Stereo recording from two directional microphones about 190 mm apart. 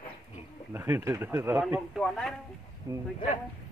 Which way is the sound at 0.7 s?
15° right (ahead or behind).